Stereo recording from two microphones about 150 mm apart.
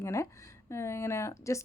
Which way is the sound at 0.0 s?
20° left (ahead or behind).